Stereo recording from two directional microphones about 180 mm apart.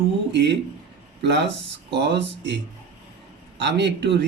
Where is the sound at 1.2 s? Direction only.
75° right (ahead or behind).